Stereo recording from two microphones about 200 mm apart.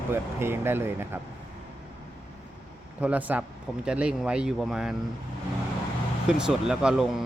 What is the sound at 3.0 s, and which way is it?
Speech, 5° right (ahead or behind).